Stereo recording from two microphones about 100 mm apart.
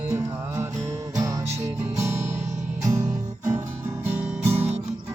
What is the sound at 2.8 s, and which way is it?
Music, 30° right (ahead or behind).